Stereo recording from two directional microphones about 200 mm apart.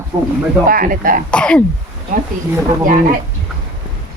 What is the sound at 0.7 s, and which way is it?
Speech, 45° right (ahead or behind).